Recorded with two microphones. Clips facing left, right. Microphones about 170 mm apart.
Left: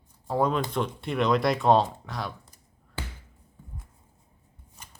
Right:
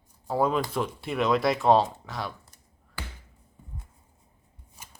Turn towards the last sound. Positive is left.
turn(degrees=-10)  # may be behind; listen again after turning